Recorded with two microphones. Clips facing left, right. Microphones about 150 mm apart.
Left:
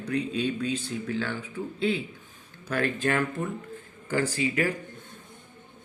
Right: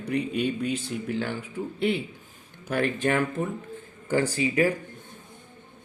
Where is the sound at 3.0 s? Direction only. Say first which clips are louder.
Right 2 dB; 20° right (ahead or behind).